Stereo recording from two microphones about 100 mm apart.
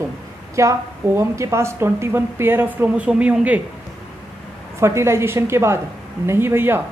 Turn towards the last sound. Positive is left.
turn(degrees=-25)  # may be behind; listen again after turning